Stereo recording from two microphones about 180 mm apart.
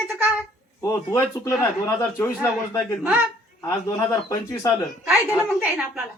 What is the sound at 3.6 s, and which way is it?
Speech, 15° left (ahead or behind).